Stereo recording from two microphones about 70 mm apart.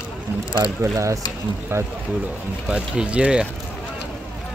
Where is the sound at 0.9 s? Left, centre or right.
Right.